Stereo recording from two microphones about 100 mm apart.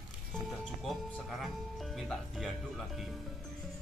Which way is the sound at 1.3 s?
Centre (ahead or behind).